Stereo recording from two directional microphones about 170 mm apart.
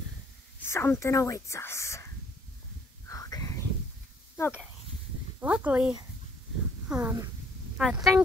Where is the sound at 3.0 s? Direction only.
20° left (ahead or behind).